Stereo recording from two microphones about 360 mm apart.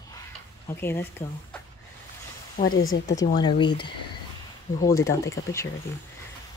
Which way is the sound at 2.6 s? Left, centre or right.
Left.